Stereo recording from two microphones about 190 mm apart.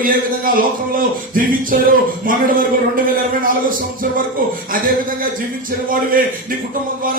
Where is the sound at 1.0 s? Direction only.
45° right (ahead or behind).